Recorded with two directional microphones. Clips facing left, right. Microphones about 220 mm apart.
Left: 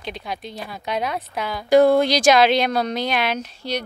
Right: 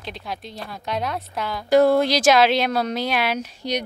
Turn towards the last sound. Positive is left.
turn(degrees=-15)  # may be behind; listen again after turning